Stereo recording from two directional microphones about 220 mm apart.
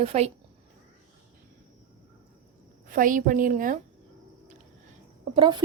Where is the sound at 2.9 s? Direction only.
35° right (ahead or behind).